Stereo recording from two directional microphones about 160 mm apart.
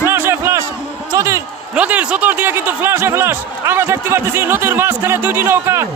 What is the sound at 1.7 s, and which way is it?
A man's voice, 10° right (ahead or behind).